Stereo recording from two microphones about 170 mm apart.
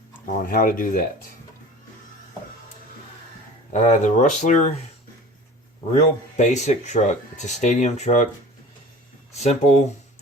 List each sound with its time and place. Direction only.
0.4 s speech: 55° left (ahead or behind)
3.7 s speech: 45° left (ahead or behind)
5.9 s speech: 40° left (ahead or behind)
9.3 s speech: 40° left (ahead or behind)